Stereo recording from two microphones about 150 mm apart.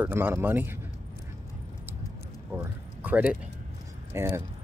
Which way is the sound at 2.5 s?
10° right (ahead or behind).